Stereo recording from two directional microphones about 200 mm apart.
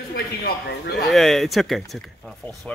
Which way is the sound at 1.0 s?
Centre (ahead or behind).